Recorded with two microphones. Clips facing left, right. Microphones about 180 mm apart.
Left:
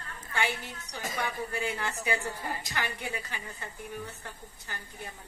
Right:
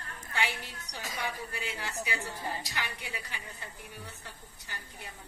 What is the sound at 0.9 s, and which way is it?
A woman's voice, 50° left (ahead or behind).